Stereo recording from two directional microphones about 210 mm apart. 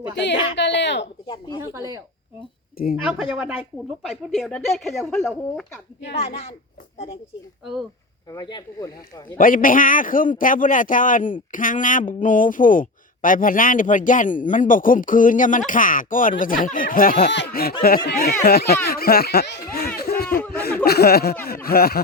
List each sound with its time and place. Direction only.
0.5 s a woman's voice: 55° left (ahead or behind)
2.9 s speech: 5° right (ahead or behind)
7.6 s speech: centre (ahead or behind)
8.3 s speech: 20° left (ahead or behind)
9.4 s a man's voice: 40° left (ahead or behind)
20.0 s a sound: 45° left (ahead or behind)
20.5 s speech: 50° left (ahead or behind)